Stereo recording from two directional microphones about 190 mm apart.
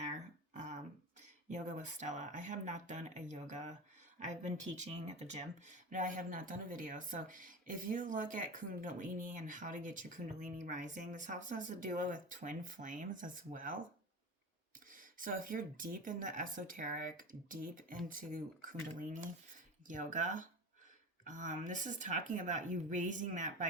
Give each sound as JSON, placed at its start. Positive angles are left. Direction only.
{"t": 0.0, "sound": "a sound", "side_deg": -40}
{"t": 1.5, "sound": "speech", "side_deg": -40}
{"t": 14.9, "sound": "speech", "side_deg": -45}